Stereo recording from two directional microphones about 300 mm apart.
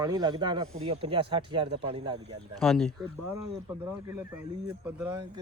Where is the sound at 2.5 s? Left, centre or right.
Centre.